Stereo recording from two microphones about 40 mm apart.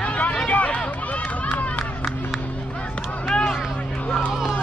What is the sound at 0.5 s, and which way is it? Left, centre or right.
Run, left.